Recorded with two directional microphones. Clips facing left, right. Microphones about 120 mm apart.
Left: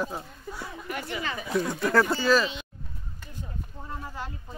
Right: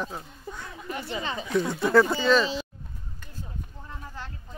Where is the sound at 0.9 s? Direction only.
25° right (ahead or behind).